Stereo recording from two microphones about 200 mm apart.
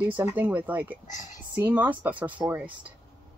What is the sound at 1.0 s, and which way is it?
Speech, 40° left (ahead or behind).